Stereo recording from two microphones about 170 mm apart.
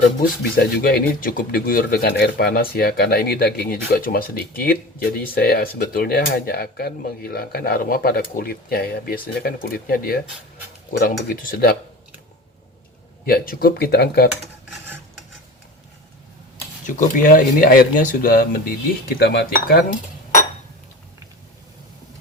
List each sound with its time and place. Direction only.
0.2 s speech: 65° left (ahead or behind)
13.2 s speech: 60° left (ahead or behind)
16.8 s speech: 50° left (ahead or behind)